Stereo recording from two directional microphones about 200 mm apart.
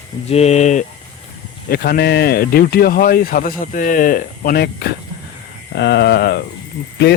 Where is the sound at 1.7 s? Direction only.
50° left (ahead or behind).